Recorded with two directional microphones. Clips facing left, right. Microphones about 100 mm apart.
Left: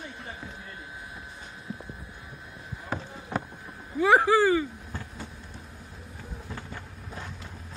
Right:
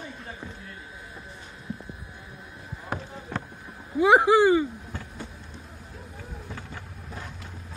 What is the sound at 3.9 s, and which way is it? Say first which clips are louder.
Speech: right 3 dB; 15° right (ahead or behind).